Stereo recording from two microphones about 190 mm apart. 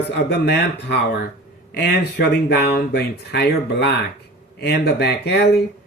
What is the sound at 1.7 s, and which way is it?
Speech, 55° left (ahead or behind).